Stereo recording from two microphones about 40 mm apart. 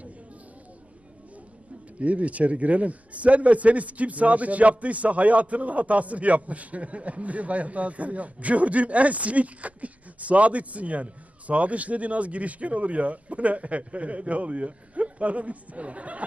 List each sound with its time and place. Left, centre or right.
2.0 s a man's voice: right